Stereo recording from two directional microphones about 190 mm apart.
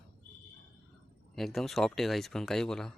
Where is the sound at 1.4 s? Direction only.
Centre (ahead or behind).